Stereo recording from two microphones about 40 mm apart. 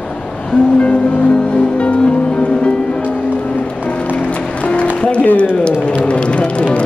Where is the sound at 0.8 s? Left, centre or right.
Left.